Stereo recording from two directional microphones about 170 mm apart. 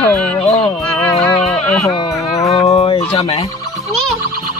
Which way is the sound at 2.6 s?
35° left (ahead or behind).